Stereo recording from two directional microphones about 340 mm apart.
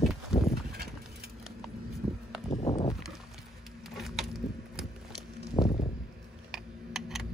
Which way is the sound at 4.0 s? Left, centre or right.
Centre.